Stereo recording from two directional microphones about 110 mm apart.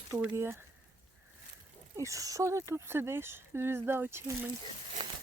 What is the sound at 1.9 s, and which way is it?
Speech, 30° right (ahead or behind).